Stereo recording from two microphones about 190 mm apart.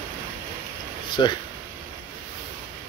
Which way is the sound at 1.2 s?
25° left (ahead or behind).